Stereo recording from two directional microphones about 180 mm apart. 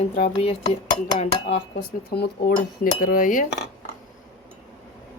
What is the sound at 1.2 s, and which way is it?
Speech, 35° left (ahead or behind).